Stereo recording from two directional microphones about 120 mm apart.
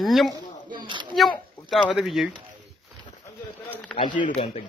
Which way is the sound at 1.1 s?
Centre (ahead or behind).